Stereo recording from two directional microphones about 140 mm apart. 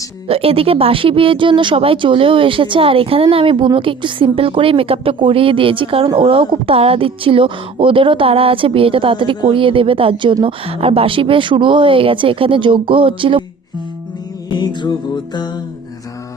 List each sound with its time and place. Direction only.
0.3 s speech: 45° right (ahead or behind)
14.5 s music: 30° left (ahead or behind)